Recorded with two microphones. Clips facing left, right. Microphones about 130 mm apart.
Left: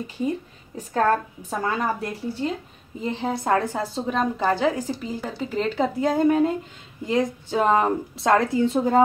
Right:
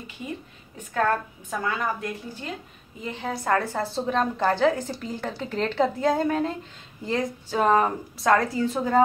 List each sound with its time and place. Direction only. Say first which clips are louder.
1.5 s a woman's voice: left 3 dB; 35° left (ahead or behind)